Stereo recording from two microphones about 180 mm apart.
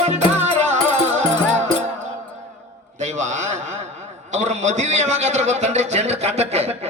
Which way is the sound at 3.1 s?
40° right (ahead or behind).